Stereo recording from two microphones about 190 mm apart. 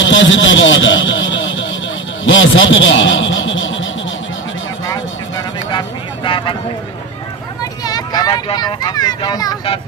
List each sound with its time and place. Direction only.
0.0 s a man's voice: 80° left
5.7 s vehicle: 25° left (ahead or behind)
7.8 s speech: 20° left (ahead or behind)